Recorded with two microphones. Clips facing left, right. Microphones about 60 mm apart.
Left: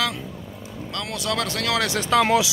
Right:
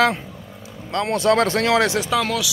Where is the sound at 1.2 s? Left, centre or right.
Right.